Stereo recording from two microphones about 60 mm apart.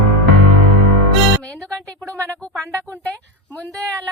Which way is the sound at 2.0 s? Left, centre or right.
Centre.